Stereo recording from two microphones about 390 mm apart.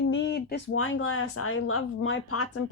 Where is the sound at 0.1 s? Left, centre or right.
Left.